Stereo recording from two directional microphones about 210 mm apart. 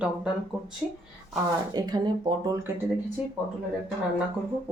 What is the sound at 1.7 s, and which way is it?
Speech, 20° right (ahead or behind).